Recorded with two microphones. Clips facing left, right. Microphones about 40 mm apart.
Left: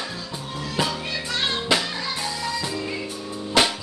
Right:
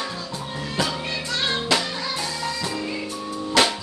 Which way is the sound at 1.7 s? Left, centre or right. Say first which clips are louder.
Left 1 dB; centre.